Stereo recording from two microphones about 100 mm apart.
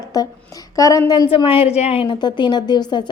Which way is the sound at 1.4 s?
65° left (ahead or behind).